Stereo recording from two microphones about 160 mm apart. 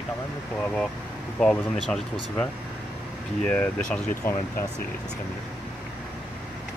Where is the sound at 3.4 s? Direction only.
10° left (ahead or behind).